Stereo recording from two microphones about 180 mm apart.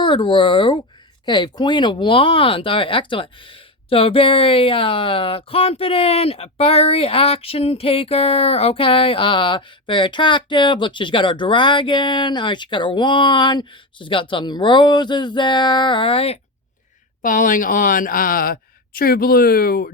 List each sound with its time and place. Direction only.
0.0 s speech: 25° left (ahead or behind)
17.2 s speech: 45° left (ahead or behind)